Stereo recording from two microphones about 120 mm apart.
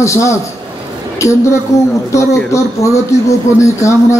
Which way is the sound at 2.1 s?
25° left (ahead or behind).